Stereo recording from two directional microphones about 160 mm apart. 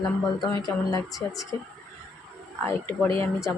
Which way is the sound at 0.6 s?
25° left (ahead or behind).